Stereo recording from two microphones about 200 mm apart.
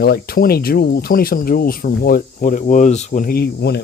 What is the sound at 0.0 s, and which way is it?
Speech, 50° left (ahead or behind).